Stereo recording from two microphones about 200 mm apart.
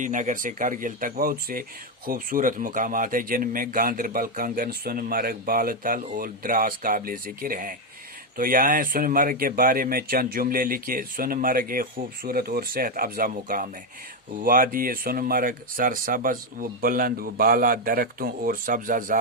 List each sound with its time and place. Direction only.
0.0 s speech: 40° right (ahead or behind)